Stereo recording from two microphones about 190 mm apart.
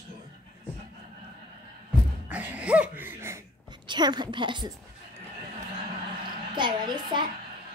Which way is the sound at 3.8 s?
25° right (ahead or behind).